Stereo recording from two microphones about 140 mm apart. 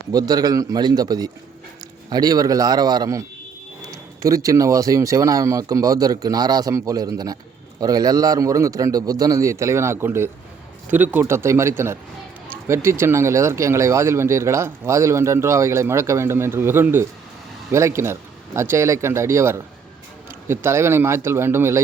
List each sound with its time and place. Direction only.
0.1 s speech: 25° right (ahead or behind)